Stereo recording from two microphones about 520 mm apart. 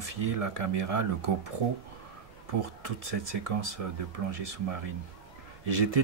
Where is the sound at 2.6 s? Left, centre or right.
Right.